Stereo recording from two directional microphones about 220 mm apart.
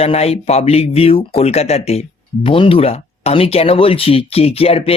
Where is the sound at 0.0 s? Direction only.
25° left (ahead or behind).